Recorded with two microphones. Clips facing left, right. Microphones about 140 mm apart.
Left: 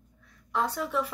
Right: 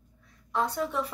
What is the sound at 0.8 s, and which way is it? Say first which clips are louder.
Speech: left 2 dB; centre (ahead or behind).